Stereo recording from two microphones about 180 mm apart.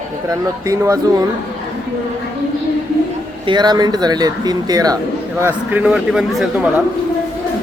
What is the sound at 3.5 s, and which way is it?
Speech, 25° right (ahead or behind).